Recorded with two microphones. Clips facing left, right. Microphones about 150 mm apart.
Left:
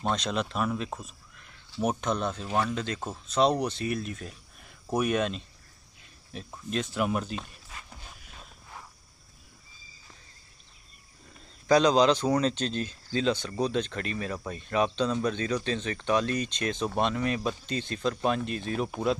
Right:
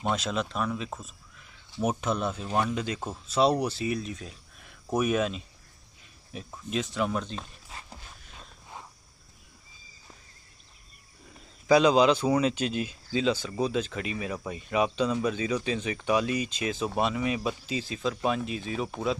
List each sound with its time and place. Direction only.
0.0 s speech: 5° right (ahead or behind)
7.7 s a sound: 30° right (ahead or behind)
11.6 s speech: 5° right (ahead or behind)